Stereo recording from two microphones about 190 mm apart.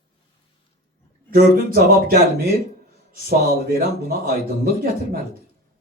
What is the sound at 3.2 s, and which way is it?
Speech, 50° right (ahead or behind).